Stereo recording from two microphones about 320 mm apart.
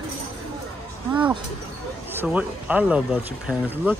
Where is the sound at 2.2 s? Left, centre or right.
Centre.